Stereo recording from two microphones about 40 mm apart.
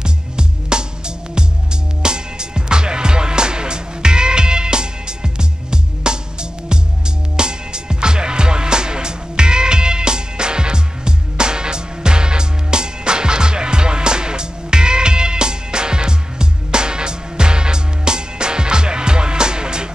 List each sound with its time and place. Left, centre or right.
0.0 s music: right
7.3 s music: right